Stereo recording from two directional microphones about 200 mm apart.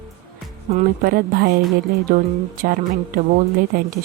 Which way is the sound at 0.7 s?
45° right (ahead or behind).